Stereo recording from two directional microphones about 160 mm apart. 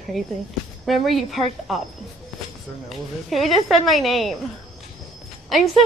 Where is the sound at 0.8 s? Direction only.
Centre (ahead or behind).